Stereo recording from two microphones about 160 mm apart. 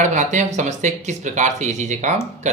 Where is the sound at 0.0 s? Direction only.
50° right (ahead or behind).